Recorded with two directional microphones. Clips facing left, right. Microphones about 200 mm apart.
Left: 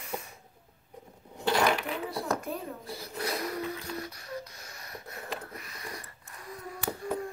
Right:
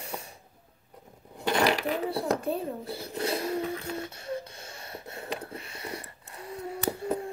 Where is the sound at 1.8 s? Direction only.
35° right (ahead or behind).